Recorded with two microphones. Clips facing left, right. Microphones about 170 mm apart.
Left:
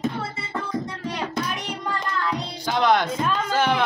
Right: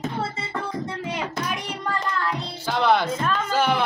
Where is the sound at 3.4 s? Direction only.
10° right (ahead or behind).